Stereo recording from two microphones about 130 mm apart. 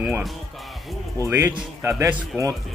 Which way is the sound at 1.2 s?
15° right (ahead or behind).